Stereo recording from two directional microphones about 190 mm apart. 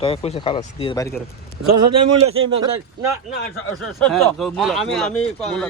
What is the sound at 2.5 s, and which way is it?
Speech, 25° right (ahead or behind).